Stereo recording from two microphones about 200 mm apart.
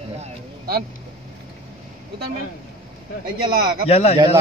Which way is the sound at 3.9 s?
30° left (ahead or behind).